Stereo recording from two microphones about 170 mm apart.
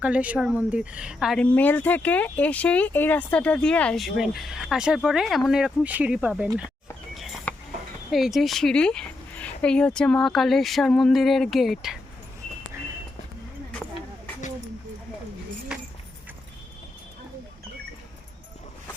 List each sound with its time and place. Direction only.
0.0 s speech: 10° right (ahead or behind)
1.5 s speech: 10° left (ahead or behind); by 6.5 s 5° right (ahead or behind)
7.5 s a sound: 10° left (ahead or behind)
8.1 s speech: centre (ahead or behind)